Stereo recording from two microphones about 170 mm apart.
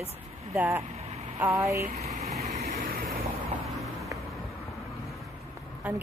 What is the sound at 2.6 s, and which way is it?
Vehicle, 55° right (ahead or behind).